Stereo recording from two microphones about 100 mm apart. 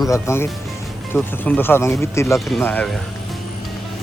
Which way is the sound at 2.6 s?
15° left (ahead or behind).